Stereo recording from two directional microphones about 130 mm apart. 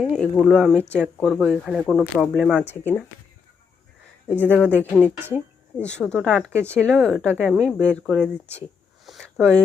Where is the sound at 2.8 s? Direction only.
15° left (ahead or behind).